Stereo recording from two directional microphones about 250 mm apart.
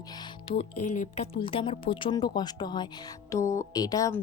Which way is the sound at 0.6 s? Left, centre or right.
Left.